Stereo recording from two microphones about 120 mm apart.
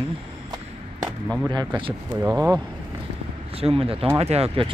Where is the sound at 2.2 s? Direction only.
15° right (ahead or behind).